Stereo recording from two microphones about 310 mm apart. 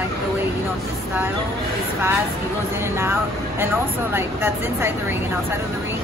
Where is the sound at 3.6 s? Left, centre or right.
Centre.